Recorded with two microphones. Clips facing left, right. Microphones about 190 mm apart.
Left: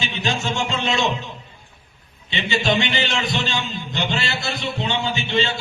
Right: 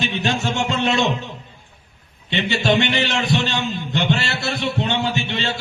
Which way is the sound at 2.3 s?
65° right (ahead or behind).